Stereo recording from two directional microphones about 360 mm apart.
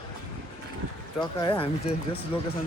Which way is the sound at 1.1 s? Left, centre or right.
Centre.